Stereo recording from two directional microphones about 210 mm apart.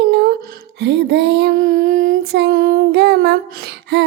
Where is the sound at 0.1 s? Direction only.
50° right (ahead or behind).